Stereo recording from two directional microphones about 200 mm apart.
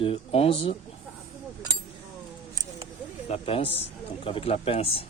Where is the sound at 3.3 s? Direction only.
30° left (ahead or behind).